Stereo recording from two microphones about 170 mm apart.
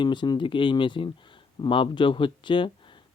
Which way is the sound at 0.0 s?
25° left (ahead or behind).